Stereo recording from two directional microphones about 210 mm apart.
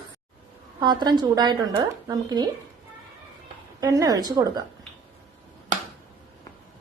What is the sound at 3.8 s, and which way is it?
Speech, 15° right (ahead or behind).